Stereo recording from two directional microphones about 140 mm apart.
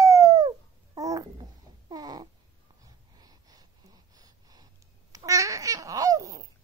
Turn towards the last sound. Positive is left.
turn(degrees=-25)  # may be behind; listen again after turning